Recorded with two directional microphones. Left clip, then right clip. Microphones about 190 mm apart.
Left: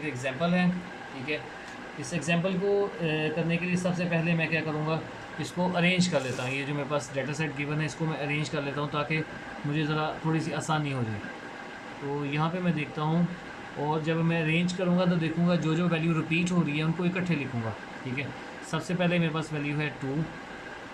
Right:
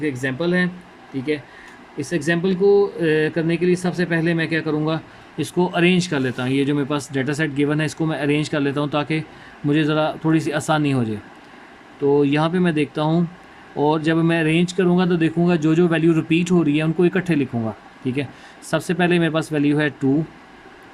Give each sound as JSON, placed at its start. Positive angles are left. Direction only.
{"t": 0.0, "sound": "speech", "side_deg": -50}
{"t": 12.3, "sound": "speech", "side_deg": -50}